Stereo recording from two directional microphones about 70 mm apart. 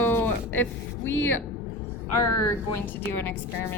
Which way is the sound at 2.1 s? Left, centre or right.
Left.